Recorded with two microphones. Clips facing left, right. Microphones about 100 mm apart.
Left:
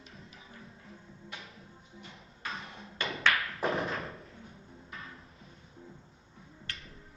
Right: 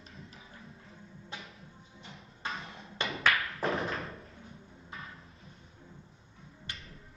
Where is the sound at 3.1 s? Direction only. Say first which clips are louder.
Even; centre (ahead or behind).